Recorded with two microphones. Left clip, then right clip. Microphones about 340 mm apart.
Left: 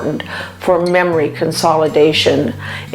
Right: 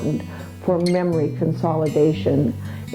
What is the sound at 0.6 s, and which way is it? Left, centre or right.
A woman's voice, centre.